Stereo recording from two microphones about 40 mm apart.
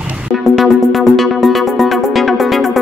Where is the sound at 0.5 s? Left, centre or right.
Centre.